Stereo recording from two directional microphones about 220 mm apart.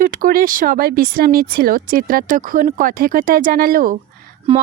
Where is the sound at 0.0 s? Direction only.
40° right (ahead or behind).